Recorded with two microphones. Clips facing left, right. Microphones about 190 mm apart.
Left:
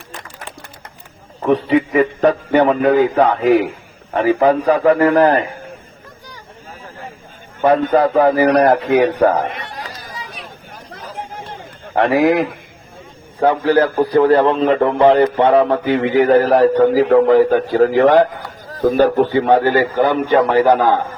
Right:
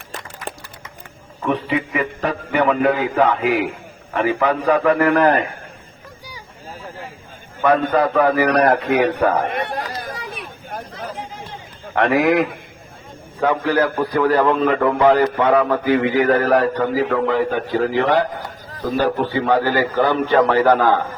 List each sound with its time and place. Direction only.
1.5 s a man's voice: 35° left (ahead or behind)
7.6 s a man's voice: 30° left (ahead or behind)
9.4 s chatter: 55° right (ahead or behind)
11.1 s run: 55° left (ahead or behind)
11.9 s a man's voice: 30° left (ahead or behind)
17.2 s speech: 40° left (ahead or behind)
19.5 s a man's voice: 25° left (ahead or behind)